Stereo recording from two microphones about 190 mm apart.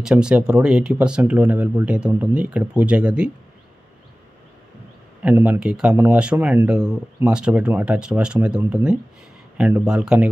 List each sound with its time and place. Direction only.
0.0 s speech: 5° right (ahead or behind)
5.2 s speech: 10° right (ahead or behind)